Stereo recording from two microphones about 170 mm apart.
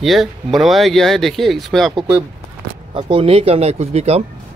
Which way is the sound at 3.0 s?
35° right (ahead or behind).